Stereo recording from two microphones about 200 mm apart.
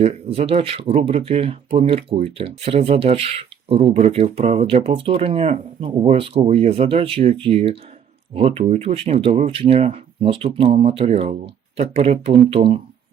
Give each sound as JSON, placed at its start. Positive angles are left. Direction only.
{"t": 0.0, "sound": "speech", "side_deg": -30}